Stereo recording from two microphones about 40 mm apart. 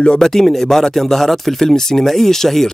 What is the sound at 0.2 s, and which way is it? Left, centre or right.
Speech, centre.